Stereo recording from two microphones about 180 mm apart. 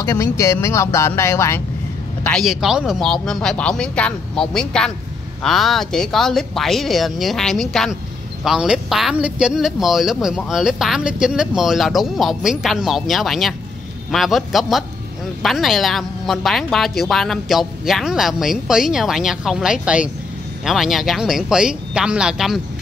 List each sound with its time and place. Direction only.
0.0 s speech: 15° left (ahead or behind)
2.2 s speech: centre (ahead or behind)